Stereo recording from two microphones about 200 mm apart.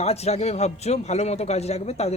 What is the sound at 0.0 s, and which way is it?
A man's voice, 30° left (ahead or behind).